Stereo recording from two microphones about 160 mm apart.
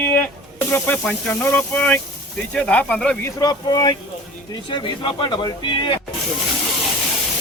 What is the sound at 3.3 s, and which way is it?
Speech, 25° left (ahead or behind).